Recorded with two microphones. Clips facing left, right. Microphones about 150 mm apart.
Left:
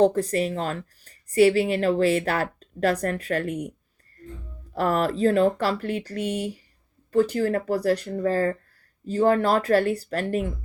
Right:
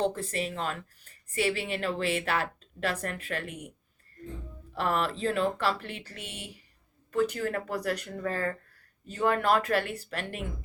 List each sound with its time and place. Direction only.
0.0 s speech: 40° left (ahead or behind)
4.7 s speech: 40° left (ahead or behind)